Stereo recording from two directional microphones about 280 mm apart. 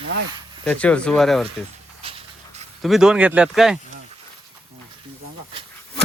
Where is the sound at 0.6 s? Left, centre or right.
Centre.